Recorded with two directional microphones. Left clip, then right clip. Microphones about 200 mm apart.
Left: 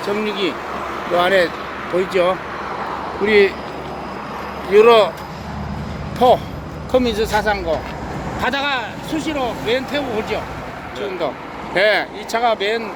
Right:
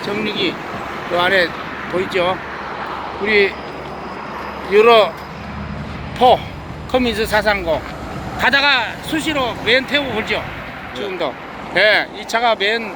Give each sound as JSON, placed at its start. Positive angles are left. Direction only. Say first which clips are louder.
{"t": 0.0, "sound": "speech", "louder": "even", "side_deg": 10}
{"t": 3.2, "sound": "speech", "louder": "left 1 dB", "side_deg": 20}
{"t": 4.7, "sound": "speech", "louder": "even", "side_deg": 0}
{"t": 6.1, "sound": "speech", "louder": "right 1 dB", "side_deg": 0}
{"t": 6.9, "sound": "speech", "louder": "even", "side_deg": -10}
{"t": 11.7, "sound": "speech", "louder": "right 2 dB", "side_deg": 5}